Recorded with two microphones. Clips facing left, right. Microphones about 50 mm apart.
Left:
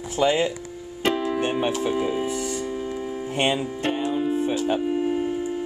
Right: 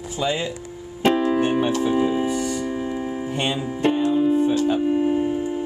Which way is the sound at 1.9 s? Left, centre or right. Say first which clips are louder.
Right 4 dB; centre.